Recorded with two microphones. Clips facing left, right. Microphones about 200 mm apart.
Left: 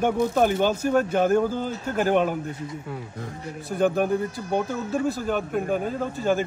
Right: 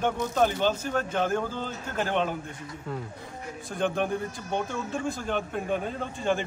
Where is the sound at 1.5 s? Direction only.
45° left (ahead or behind).